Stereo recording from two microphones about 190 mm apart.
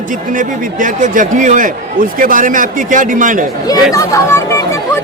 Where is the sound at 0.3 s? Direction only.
45° right (ahead or behind).